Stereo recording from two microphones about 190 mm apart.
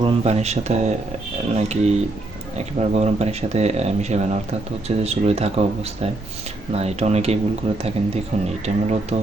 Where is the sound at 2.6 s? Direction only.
35° right (ahead or behind).